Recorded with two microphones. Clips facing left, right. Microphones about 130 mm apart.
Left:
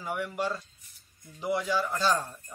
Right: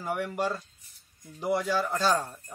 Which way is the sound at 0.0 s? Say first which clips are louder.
Right 2 dB; 45° right (ahead or behind).